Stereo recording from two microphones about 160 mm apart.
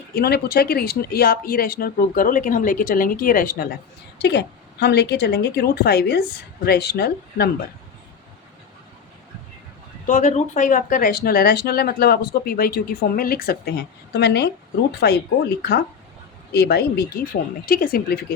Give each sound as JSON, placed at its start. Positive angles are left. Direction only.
{"t": 0.1, "sound": "speech", "side_deg": 75}
{"t": 4.2, "sound": "a woman's voice", "side_deg": 90}
{"t": 10.1, "sound": "a woman's voice", "side_deg": 50}
{"t": 17.7, "sound": "speech", "side_deg": 70}